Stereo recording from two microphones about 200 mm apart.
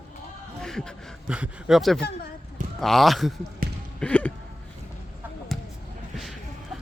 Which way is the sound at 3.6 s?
45° right (ahead or behind).